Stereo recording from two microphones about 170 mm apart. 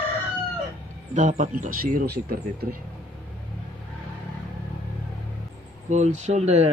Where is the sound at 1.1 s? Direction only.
50° right (ahead or behind).